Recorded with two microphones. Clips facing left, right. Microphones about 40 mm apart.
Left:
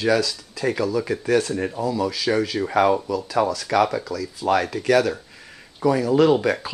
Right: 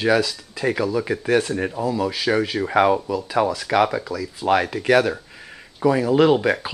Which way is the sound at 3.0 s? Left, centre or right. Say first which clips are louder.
Right 1 dB; right.